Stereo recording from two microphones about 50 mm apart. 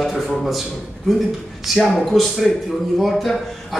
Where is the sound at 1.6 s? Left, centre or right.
Centre.